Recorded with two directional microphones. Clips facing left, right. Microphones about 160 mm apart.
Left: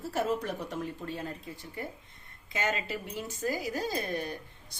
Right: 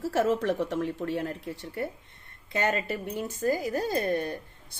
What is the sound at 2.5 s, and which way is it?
Speech, 55° right (ahead or behind).